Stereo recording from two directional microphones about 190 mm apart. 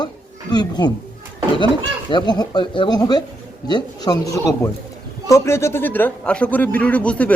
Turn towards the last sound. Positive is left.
turn(degrees=5)  # may be behind; listen again after turning